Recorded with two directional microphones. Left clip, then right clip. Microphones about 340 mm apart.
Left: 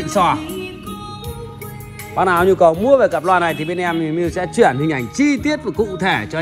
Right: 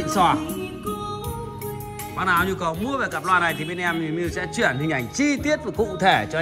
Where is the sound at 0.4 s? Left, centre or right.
Left.